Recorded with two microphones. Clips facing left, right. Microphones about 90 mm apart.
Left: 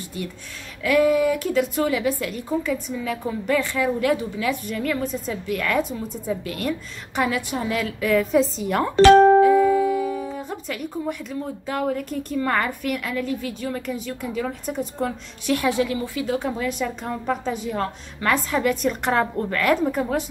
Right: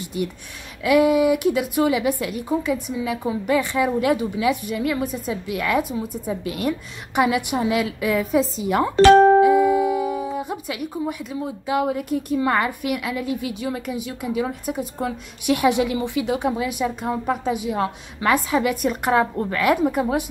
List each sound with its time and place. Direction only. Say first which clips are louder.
0.0 s a woman's voice: right 5 dB; 15° right (ahead or behind)
9.1 s music: even; 45° right (ahead or behind)
9.4 s speech: even; 15° right (ahead or behind)
15.4 s a woman's voice: right 3 dB; 15° right (ahead or behind)